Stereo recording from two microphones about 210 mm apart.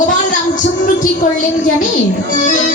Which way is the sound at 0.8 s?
40° left (ahead or behind).